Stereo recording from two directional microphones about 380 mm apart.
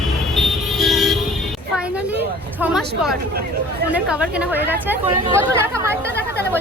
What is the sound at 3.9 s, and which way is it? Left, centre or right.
A woman's voice, centre.